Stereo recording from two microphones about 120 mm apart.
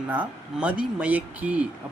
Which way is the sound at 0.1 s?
10° right (ahead or behind).